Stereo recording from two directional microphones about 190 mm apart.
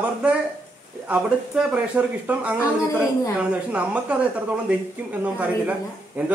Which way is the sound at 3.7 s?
5° right (ahead or behind).